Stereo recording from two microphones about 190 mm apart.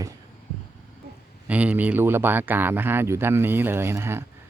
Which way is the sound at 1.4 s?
5° right (ahead or behind).